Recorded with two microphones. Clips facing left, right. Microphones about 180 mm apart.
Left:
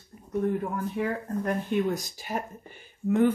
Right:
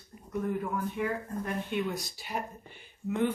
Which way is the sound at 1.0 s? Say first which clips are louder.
Left 4 dB; 35° left (ahead or behind).